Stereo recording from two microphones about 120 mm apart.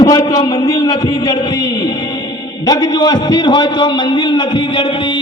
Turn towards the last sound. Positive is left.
turn(degrees=40)  # may be behind; listen again after turning